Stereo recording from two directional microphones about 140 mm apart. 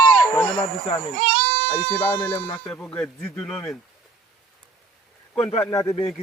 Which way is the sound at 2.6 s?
10° left (ahead or behind).